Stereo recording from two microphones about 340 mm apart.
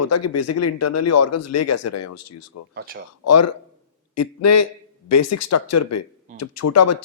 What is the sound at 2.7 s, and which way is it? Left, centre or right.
Speech, right.